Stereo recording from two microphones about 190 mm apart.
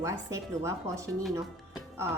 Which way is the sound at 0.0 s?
15° right (ahead or behind).